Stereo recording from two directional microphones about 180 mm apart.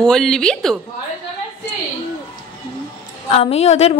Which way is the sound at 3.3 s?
35° left (ahead or behind).